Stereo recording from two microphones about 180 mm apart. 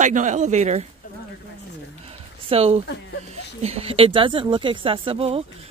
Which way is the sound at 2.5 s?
35° right (ahead or behind).